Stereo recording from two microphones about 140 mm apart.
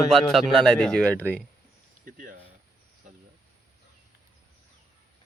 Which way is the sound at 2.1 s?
75° right (ahead or behind).